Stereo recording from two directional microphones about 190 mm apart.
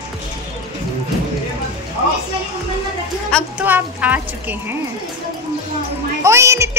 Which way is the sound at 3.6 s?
10° right (ahead or behind).